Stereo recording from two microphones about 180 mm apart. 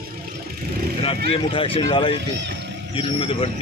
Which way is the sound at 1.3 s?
30° left (ahead or behind).